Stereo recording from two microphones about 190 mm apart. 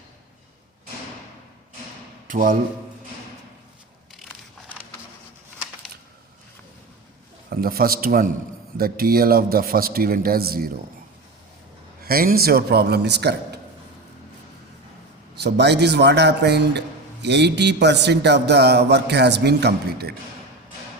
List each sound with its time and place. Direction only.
2.2 s a man's voice: 45° right (ahead or behind)
7.5 s a man's voice: 50° right (ahead or behind)
12.0 s speech: 50° right (ahead or behind)
15.4 s speech: 60° right (ahead or behind)